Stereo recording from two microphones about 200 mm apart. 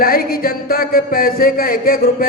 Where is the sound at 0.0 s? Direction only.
45° left (ahead or behind).